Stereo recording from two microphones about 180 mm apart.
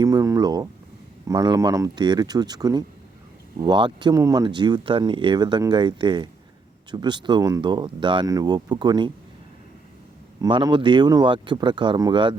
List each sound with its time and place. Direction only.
0.0 s a sound: 20° right (ahead or behind)
1.3 s speech: 20° right (ahead or behind)
10.4 s speech: 25° right (ahead or behind)